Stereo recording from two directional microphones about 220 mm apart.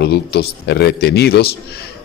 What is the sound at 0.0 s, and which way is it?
Speech, 50° left (ahead or behind).